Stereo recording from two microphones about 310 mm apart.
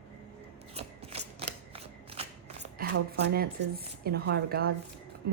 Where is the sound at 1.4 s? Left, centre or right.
Centre.